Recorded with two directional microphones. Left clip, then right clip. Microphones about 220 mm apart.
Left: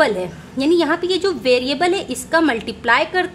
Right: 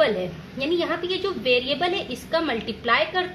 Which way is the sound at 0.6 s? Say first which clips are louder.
Left 8 dB; 50° left (ahead or behind).